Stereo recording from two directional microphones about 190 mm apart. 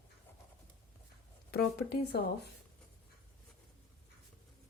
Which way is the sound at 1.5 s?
55° left (ahead or behind).